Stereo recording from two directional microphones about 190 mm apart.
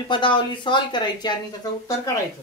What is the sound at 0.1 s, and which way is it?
Speech, 25° left (ahead or behind).